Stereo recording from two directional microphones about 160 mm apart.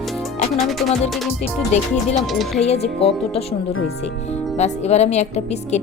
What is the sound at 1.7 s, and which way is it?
Speech, 45° left (ahead or behind).